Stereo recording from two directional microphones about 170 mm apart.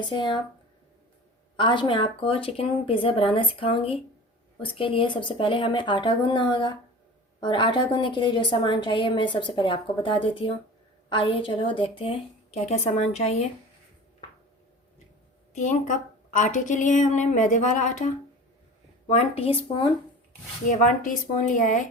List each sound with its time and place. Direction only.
0.1 s a woman's voice: 25° left (ahead or behind)
1.5 s a woman's voice: 30° left (ahead or behind)
15.5 s a woman's voice: 45° left (ahead or behind)
20.7 s a woman's voice: 50° left (ahead or behind)